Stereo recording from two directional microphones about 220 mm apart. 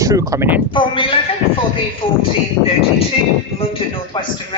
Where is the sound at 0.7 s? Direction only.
20° left (ahead or behind).